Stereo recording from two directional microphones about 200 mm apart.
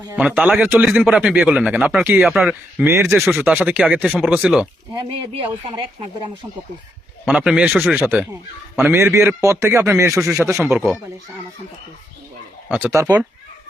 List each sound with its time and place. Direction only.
0.2 s speech: 5° right (ahead or behind)
3.2 s speech: centre (ahead or behind)
5.2 s speech: 25° right (ahead or behind)
7.3 s a man's voice: 5° right (ahead or behind)
10.2 s speech: 5° right (ahead or behind)
12.7 s a man's voice: 10° right (ahead or behind)